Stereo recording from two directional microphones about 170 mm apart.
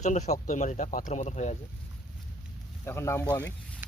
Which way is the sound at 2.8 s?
15° left (ahead or behind).